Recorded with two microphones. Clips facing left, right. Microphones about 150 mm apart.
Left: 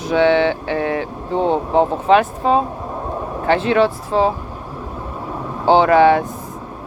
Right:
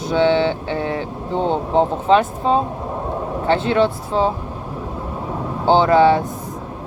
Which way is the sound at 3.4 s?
30° right (ahead or behind).